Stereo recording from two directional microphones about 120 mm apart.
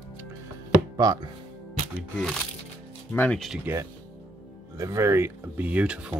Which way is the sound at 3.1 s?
15° left (ahead or behind).